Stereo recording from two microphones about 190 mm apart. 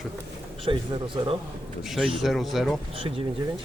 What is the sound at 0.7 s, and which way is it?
Speech, 30° right (ahead or behind).